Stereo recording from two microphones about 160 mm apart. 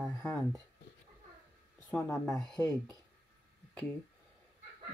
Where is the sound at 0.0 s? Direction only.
15° left (ahead or behind).